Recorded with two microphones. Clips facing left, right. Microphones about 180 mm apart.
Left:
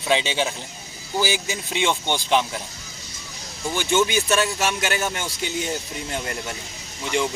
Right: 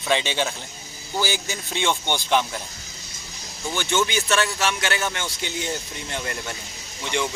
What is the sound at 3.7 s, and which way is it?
Speech, 15° left (ahead or behind).